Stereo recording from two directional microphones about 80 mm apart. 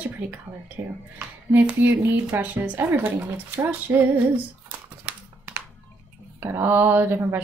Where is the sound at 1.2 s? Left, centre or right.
Right.